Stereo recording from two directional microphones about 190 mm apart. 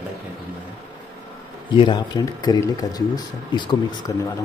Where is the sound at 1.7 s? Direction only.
25° left (ahead or behind).